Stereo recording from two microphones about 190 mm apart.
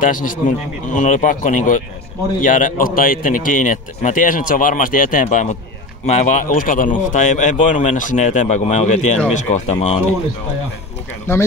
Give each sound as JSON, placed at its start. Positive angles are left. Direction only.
{"t": 0.0, "sound": "a man's voice", "side_deg": 45}
{"t": 11.3, "sound": "speech", "side_deg": 15}